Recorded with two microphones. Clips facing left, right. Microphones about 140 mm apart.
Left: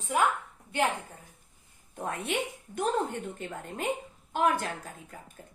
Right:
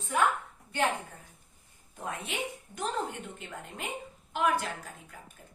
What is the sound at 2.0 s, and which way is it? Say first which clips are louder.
A woman's voice: left 4 dB; 60° left (ahead or behind).